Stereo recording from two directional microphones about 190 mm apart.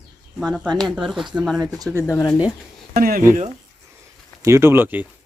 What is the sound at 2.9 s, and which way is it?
Speech, 50° right (ahead or behind).